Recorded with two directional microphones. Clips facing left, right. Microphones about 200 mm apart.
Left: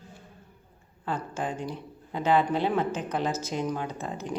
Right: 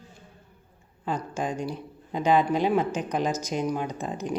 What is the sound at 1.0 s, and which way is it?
A woman's voice, 15° right (ahead or behind).